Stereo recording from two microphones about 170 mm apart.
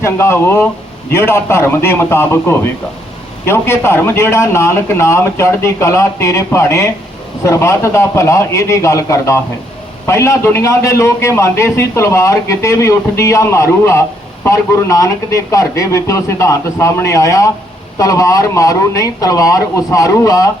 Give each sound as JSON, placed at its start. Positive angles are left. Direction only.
{"t": 0.0, "sound": "a man's voice", "side_deg": 15}